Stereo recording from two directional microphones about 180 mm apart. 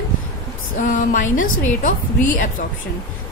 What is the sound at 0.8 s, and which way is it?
A woman's voice, 45° left (ahead or behind).